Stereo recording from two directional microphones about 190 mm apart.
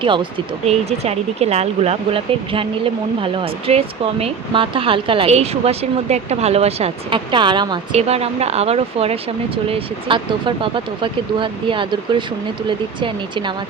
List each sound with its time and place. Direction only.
0.0 s speech: 25° right (ahead or behind)